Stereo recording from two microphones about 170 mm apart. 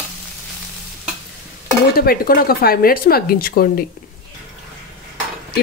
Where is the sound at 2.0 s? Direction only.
60° left (ahead or behind).